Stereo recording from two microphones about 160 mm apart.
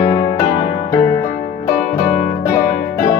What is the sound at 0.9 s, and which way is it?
Music, 15° left (ahead or behind).